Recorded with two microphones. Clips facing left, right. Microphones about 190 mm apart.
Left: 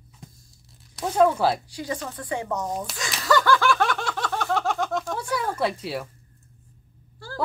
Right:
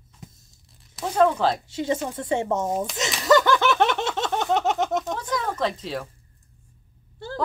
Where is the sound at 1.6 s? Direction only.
25° right (ahead or behind).